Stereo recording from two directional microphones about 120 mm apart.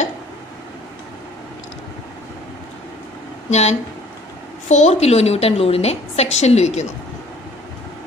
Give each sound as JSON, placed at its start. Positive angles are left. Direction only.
{"t": 3.4, "sound": "a woman's voice", "side_deg": 70}